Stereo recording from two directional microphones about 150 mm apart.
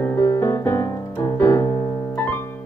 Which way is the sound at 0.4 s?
20° left (ahead or behind).